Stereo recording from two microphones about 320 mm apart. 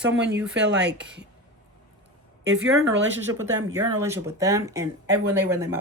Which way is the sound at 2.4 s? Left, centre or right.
Right.